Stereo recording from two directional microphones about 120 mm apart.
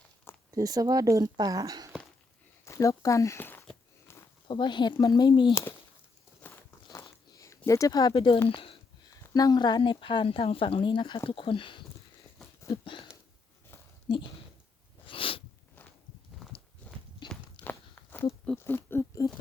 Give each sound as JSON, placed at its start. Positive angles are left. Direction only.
{"t": 0.5, "sound": "speech", "side_deg": -30}
{"t": 2.6, "sound": "speech", "side_deg": 25}
{"t": 4.1, "sound": "a sound", "side_deg": 20}
{"t": 4.4, "sound": "speech", "side_deg": 40}
{"t": 6.4, "sound": "a sound", "side_deg": 15}
{"t": 6.9, "sound": "a sound", "side_deg": 25}
{"t": 8.4, "sound": "speech", "side_deg": 50}
{"t": 9.3, "sound": "speech", "side_deg": 35}
{"t": 14.1, "sound": "speech", "side_deg": 40}
{"t": 15.0, "sound": "sneeze", "side_deg": 50}
{"t": 16.5, "sound": "walk", "side_deg": 45}
{"t": 17.6, "sound": "a sound", "side_deg": 15}